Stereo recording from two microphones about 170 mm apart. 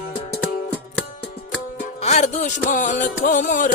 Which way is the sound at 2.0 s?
40° left (ahead or behind).